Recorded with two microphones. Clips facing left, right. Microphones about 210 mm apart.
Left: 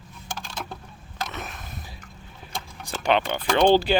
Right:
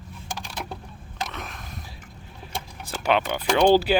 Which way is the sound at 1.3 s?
5° left (ahead or behind).